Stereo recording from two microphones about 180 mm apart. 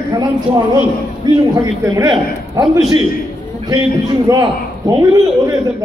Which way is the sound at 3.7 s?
20° right (ahead or behind).